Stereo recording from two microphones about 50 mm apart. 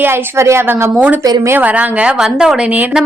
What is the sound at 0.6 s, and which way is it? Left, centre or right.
Speech, right.